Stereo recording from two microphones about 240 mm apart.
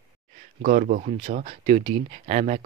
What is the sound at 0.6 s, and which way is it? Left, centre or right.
Speech, right.